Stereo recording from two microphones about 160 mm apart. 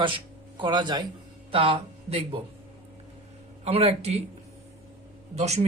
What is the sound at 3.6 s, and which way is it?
Speech, 40° right (ahead or behind).